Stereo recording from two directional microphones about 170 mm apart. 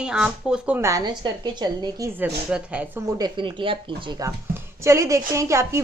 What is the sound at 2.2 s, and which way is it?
Speech, 10° right (ahead or behind).